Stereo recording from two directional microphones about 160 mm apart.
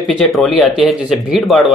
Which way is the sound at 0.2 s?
Centre (ahead or behind).